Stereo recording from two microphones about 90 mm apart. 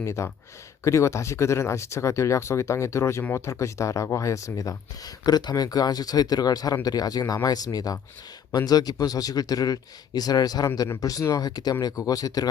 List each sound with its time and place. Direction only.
0.0 s speech: 30° left (ahead or behind)